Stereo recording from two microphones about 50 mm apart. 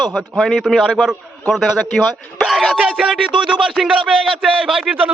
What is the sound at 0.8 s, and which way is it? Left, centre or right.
Speech, centre.